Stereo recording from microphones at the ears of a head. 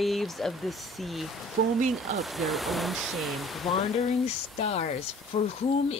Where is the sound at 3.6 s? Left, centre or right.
Left.